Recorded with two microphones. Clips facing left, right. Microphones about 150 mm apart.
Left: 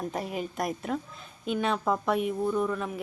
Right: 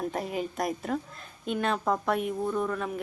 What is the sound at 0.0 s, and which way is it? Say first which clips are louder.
A woman's voice: right 1 dB; centre (ahead or behind).